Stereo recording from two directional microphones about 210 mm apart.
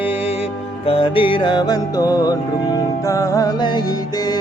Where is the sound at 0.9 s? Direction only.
25° left (ahead or behind).